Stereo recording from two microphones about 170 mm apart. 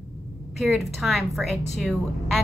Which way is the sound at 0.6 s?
Centre (ahead or behind).